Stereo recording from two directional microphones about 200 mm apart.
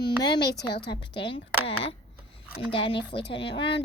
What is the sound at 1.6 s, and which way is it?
Speech, 65° left (ahead or behind).